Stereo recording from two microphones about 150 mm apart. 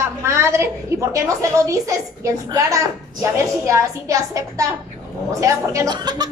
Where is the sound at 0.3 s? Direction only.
20° right (ahead or behind).